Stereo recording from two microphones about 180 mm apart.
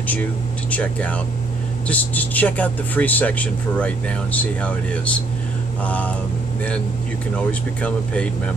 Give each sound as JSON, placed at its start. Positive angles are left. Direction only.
{"t": 0.1, "sound": "speech", "side_deg": 10}
{"t": 7.3, "sound": "speech", "side_deg": 5}